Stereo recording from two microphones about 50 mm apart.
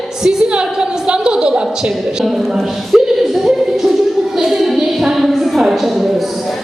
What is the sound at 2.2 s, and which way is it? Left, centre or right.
A woman's voice, centre.